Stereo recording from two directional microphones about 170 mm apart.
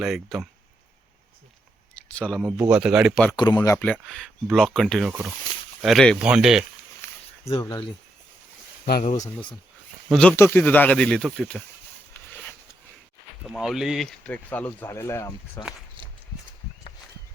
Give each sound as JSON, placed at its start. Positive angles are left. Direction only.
{"t": 0.0, "sound": "speech", "side_deg": 0}
{"t": 2.0, "sound": "speech", "side_deg": 5}
{"t": 3.3, "sound": "speech", "side_deg": 25}
{"t": 3.8, "sound": "speech", "side_deg": 5}
{"t": 9.0, "sound": "speech", "side_deg": 45}
{"t": 10.1, "sound": "speech", "side_deg": 5}
{"t": 12.3, "sound": "a sound", "side_deg": 10}
{"t": 13.5, "sound": "speech", "side_deg": 0}